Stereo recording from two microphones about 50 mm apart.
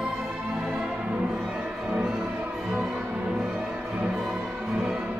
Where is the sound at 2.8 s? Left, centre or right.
Right.